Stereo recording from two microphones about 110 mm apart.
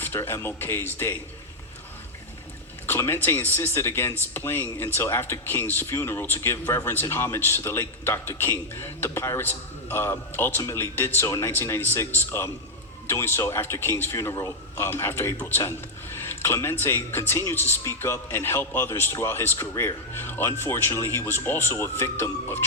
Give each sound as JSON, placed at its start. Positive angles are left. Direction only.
{"t": 0.0, "sound": "speech", "side_deg": 20}
{"t": 2.8, "sound": "speech", "side_deg": 20}